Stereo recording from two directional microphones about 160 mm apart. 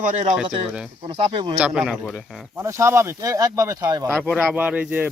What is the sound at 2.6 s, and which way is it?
Speech, 15° right (ahead or behind).